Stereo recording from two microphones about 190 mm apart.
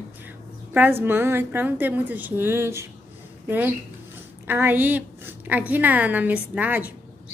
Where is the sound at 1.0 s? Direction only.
10° right (ahead or behind).